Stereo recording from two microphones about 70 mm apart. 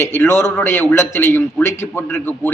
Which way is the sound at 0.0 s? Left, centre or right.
Left.